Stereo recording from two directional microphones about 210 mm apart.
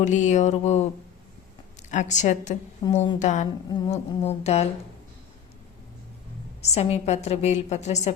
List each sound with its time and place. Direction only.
0.0 s a woman's voice: 35° left (ahead or behind)
1.9 s a woman's voice: 35° left (ahead or behind)
3.7 s music: 30° left (ahead or behind)
6.6 s a woman's voice: 30° left (ahead or behind)